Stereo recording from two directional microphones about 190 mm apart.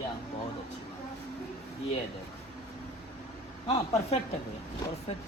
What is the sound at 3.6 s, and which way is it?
Speech, 30° left (ahead or behind).